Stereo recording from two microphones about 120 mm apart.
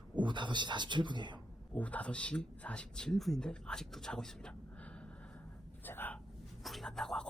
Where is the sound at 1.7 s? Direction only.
10° left (ahead or behind).